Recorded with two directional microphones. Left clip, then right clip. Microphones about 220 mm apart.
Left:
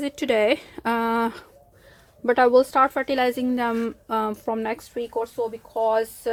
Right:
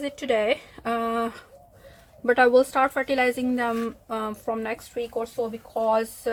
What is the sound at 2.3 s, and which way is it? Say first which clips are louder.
Speech: left 1 dB; 20° left (ahead or behind).